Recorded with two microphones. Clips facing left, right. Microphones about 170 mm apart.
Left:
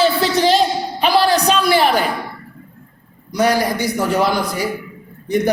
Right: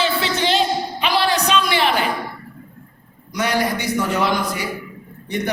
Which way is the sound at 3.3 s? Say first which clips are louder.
Left 4 dB; 40° left (ahead or behind).